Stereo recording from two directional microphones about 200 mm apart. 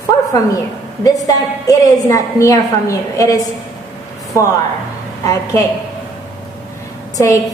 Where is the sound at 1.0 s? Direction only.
15° left (ahead or behind).